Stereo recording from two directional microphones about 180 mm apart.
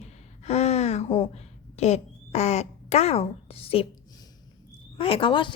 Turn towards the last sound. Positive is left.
turn(degrees=25)  # may be behind; listen again after turning